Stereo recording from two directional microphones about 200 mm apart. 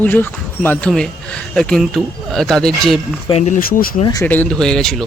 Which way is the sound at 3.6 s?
45° left (ahead or behind).